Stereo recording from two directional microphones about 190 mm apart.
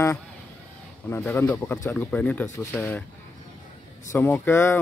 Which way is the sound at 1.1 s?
10° left (ahead or behind).